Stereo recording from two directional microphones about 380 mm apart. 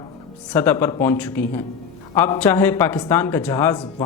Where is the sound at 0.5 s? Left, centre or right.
Centre.